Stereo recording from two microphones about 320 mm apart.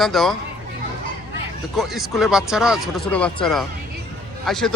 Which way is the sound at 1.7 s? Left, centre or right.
Centre.